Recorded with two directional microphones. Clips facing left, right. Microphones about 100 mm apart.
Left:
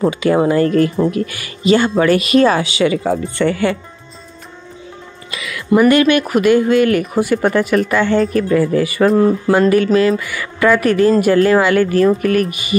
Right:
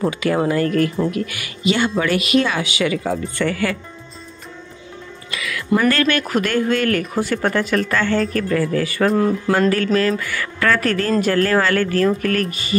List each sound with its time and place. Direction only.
0.0 s speech: 25° left (ahead or behind)
5.3 s music: 20° left (ahead or behind)
5.8 s speech: 15° left (ahead or behind)